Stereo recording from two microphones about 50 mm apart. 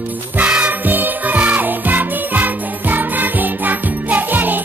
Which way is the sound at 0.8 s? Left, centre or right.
Right.